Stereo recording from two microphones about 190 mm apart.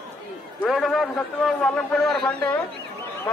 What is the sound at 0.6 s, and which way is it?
A man's voice, centre (ahead or behind).